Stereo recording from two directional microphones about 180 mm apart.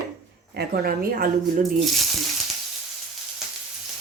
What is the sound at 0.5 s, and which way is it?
Speech, 60° right (ahead or behind).